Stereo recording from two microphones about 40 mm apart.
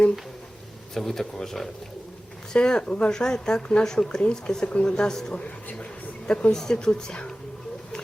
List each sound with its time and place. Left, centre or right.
0.9 s speech: centre
2.6 s speech: left
6.5 s speech: centre